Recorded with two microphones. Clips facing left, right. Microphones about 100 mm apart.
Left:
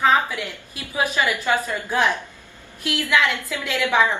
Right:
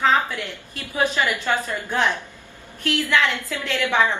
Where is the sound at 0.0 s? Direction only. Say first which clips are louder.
Left 1 dB; 15° left (ahead or behind).